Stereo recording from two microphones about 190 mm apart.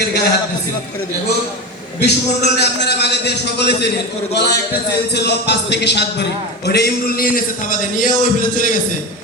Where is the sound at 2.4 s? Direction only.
60° left (ahead or behind); by 8.8 s 45° left (ahead or behind).